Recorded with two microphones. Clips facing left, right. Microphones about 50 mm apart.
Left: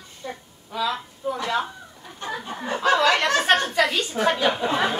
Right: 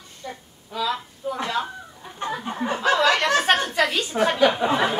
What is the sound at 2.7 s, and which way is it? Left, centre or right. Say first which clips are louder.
Speech: left 1 dB; centre.